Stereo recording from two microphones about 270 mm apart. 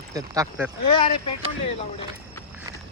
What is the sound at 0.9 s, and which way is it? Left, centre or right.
Speech, centre.